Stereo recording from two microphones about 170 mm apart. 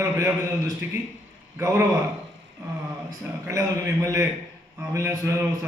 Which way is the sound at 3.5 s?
20° right (ahead or behind).